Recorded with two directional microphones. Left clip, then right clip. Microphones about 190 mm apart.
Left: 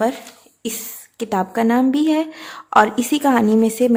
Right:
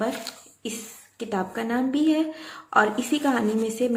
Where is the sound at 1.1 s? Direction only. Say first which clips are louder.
Left 8 dB; 50° left (ahead or behind).